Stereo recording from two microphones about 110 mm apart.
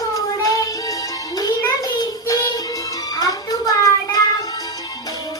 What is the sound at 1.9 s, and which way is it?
Child singing, 35° left (ahead or behind).